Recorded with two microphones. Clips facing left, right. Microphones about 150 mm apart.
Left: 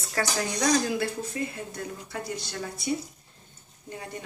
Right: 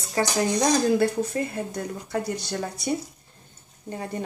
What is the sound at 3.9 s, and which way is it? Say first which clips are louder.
Speech: right 7 dB; 35° right (ahead or behind).